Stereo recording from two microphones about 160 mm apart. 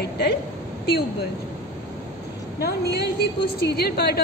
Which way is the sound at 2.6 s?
85° left.